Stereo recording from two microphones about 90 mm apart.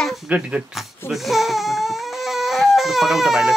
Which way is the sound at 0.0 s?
Centre (ahead or behind).